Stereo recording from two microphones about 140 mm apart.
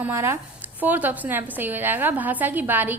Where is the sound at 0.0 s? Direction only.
15° right (ahead or behind).